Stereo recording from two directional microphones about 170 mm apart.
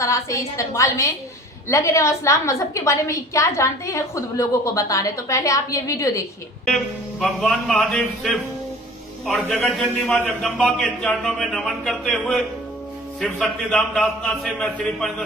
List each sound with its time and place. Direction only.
0.0 s a woman's voice: 15° left (ahead or behind)
6.7 s a man's voice: centre (ahead or behind)